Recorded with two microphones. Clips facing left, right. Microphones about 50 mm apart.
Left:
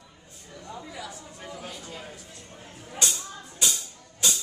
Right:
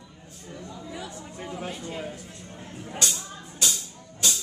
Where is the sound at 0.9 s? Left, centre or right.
Right.